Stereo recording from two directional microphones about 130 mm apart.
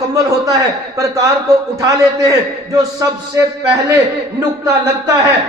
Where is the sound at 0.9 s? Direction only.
25° right (ahead or behind).